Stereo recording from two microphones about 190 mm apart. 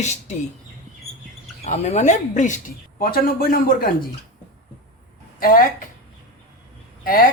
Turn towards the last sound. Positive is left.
turn(degrees=50)  # may be behind; listen again after turning